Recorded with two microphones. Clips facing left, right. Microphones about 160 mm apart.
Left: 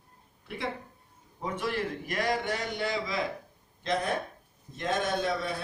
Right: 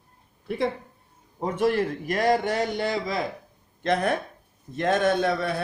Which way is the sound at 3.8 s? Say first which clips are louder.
Right 6 dB; 65° right (ahead or behind).